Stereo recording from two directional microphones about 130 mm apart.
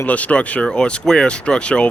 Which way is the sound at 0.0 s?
10° left (ahead or behind).